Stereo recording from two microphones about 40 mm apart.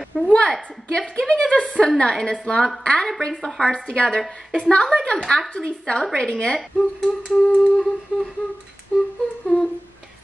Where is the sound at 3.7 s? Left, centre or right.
Left.